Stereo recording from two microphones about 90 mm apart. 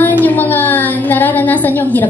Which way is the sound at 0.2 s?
20° left (ahead or behind).